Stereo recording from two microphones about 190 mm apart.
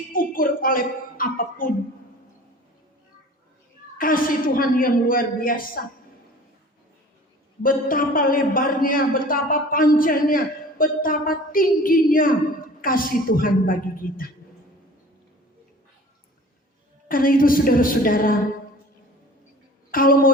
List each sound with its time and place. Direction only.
0.1 s a man's voice: 50° left (ahead or behind)
3.9 s a man's voice: 50° left (ahead or behind)
7.6 s a man's voice: 50° left (ahead or behind)
17.1 s a man's voice: 45° left (ahead or behind)
19.9 s a man's voice: 50° left (ahead or behind)